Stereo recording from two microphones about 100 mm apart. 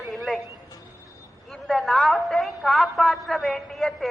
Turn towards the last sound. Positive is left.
turn(degrees=0)  # may be behind; listen again after turning